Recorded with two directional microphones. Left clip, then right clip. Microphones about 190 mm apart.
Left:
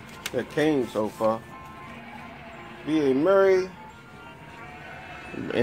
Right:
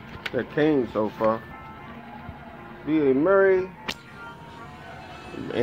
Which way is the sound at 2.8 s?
30° left (ahead or behind).